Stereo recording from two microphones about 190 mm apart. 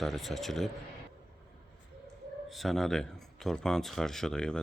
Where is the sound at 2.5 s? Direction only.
Centre (ahead or behind).